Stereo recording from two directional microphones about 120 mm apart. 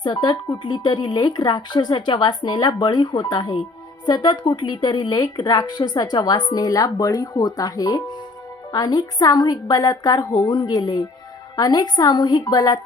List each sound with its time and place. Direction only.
0.0 s a woman's voice: 35° left (ahead or behind)